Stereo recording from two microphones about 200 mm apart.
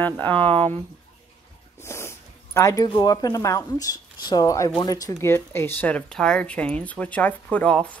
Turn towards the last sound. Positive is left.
turn(degrees=5)  # may be behind; listen again after turning